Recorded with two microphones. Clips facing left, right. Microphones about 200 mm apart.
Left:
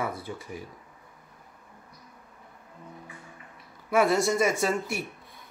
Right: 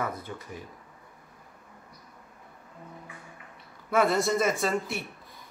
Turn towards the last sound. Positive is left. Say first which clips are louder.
# left 1 dB
turn(degrees=0)  # may be behind; listen again after turning